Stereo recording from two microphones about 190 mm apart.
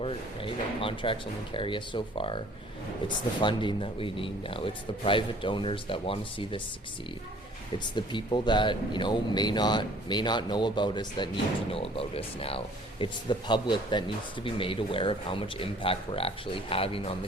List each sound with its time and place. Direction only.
0.0 s speech: 30° left (ahead or behind)
3.4 s speech: 25° left (ahead or behind)
7.9 s speech: 25° left (ahead or behind)